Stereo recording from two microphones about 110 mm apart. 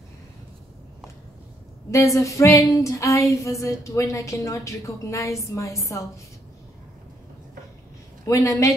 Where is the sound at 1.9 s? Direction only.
30° left (ahead or behind).